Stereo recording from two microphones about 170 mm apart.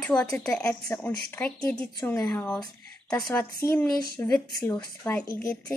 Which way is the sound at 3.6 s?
15° left (ahead or behind).